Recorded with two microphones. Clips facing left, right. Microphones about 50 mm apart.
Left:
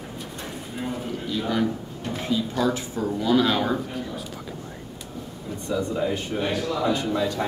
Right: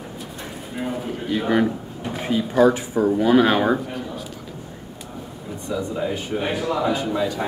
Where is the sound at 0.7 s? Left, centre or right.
Centre.